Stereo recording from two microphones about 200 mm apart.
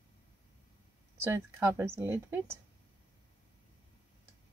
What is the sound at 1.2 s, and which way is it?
Speech, 10° right (ahead or behind).